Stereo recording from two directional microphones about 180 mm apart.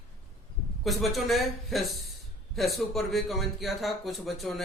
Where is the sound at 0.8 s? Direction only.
Centre (ahead or behind).